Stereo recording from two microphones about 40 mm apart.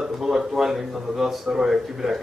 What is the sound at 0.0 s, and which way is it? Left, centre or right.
Speech, centre.